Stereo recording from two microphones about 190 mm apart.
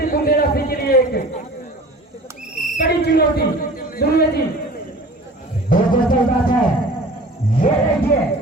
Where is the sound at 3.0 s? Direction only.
55° left (ahead or behind).